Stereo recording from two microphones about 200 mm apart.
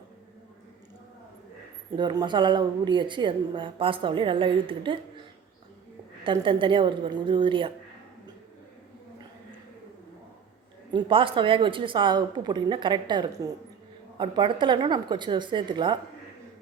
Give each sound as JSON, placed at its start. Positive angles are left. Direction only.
{"t": 2.0, "sound": "a woman's voice", "side_deg": -20}
{"t": 6.2, "sound": "a woman's voice", "side_deg": -25}
{"t": 10.9, "sound": "a woman's voice", "side_deg": -25}